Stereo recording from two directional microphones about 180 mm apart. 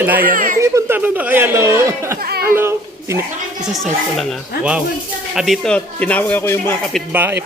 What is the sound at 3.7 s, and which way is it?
A man's voice, centre (ahead or behind).